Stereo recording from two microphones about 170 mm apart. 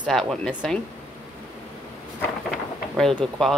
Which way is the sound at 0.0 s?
5° left (ahead or behind).